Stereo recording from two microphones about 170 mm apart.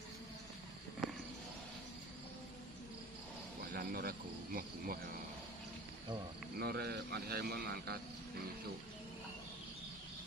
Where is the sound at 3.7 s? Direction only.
60° right (ahead or behind).